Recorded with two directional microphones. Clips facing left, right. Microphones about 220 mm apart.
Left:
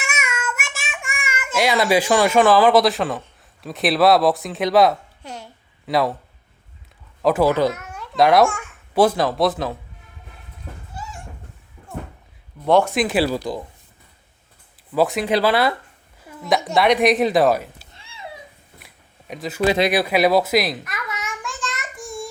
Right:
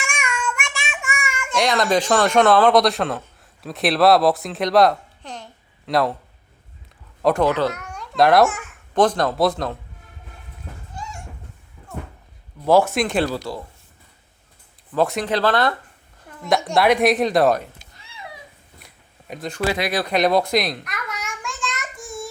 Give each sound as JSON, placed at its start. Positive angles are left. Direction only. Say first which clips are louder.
{"t": 0.0, "sound": "child singing", "louder": "right 1 dB", "side_deg": 5}
{"t": 7.2, "sound": "a woman's voice", "louder": "left 1 dB", "side_deg": 5}
{"t": 7.7, "sound": "babbling", "louder": "left 1 dB", "side_deg": 5}
{"t": 8.9, "sound": "speech", "louder": "left 1 dB", "side_deg": 10}
{"t": 11.0, "sound": "cat", "louder": "right 1 dB", "side_deg": 5}
{"t": 12.6, "sound": "speech", "louder": "even", "side_deg": -5}
{"t": 14.8, "sound": "a woman's voice", "louder": "left 2 dB", "side_deg": 5}
{"t": 17.9, "sound": "a sound", "louder": "left 2 dB", "side_deg": 25}
{"t": 19.3, "sound": "speech", "louder": "left 2 dB", "side_deg": 5}
{"t": 19.6, "sound": "speech", "louder": "left 5 dB", "side_deg": 25}
{"t": 19.9, "sound": "babbling", "louder": "left 2 dB", "side_deg": 10}